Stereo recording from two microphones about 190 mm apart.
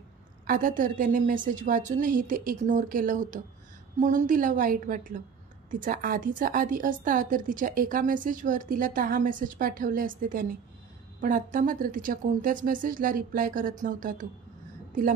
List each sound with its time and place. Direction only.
0.5 s a woman's voice: 45° right (ahead or behind)